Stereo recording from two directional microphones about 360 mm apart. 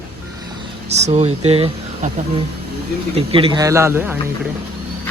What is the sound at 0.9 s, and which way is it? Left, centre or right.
Speech, centre.